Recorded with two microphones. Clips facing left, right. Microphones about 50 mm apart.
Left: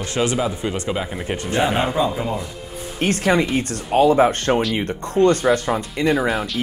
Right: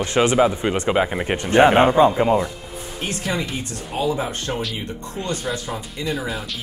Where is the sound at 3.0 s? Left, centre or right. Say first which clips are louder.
Left 8 dB; left.